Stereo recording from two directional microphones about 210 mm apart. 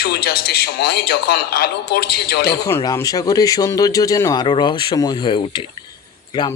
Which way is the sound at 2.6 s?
15° left (ahead or behind).